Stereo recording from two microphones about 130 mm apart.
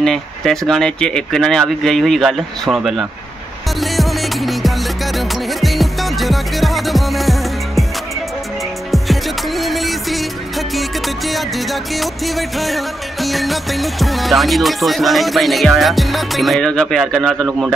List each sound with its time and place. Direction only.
0.0 s music: 5° left (ahead or behind)
8.9 s music: centre (ahead or behind)